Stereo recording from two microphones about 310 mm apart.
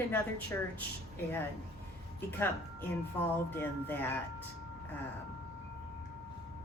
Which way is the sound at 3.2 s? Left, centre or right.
Centre.